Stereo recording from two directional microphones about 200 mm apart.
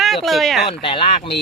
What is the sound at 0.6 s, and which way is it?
Speech, 25° left (ahead or behind).